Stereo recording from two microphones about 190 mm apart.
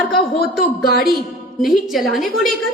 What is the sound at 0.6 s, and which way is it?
Speech, 50° left (ahead or behind).